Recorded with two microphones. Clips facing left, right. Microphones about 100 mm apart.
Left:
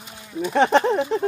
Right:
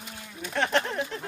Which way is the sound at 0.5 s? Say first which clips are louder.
Left 9 dB; 90° left.